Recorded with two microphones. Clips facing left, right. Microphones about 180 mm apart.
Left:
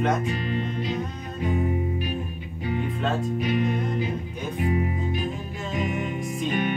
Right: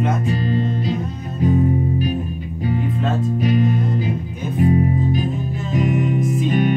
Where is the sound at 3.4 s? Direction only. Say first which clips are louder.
Right 7 dB; 40° right (ahead or behind).